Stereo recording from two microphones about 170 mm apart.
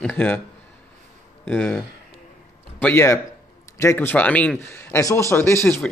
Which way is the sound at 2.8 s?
15° left (ahead or behind).